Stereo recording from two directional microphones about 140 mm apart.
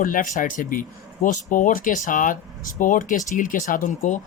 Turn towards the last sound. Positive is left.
turn(degrees=60)  # may be behind; listen again after turning